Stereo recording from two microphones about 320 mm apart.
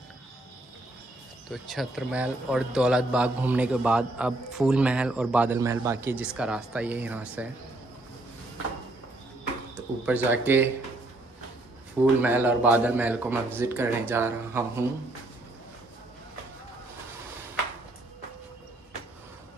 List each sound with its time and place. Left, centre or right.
1.5 s a man's voice: centre
10.0 s a man's voice: centre
12.2 s a man's voice: centre